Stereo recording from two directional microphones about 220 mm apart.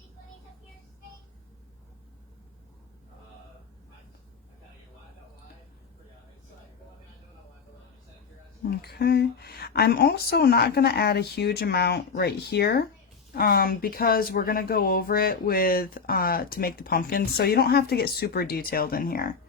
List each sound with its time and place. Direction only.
8.8 s speech: 45° left (ahead or behind)